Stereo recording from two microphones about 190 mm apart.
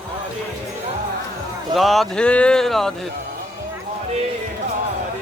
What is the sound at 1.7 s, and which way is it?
Speech, centre (ahead or behind).